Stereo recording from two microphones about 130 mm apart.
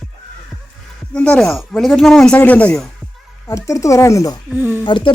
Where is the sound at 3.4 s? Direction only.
25° left (ahead or behind).